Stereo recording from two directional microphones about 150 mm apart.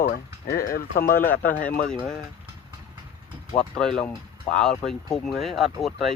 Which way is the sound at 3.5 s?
5° left (ahead or behind).